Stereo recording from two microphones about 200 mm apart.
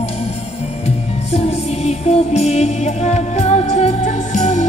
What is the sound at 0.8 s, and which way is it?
Music, 30° left (ahead or behind).